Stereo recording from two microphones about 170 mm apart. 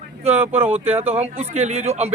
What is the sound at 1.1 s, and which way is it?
A man's voice, 40° right (ahead or behind).